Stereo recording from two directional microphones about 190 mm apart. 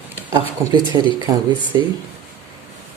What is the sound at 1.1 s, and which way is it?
Speech, 25° right (ahead or behind).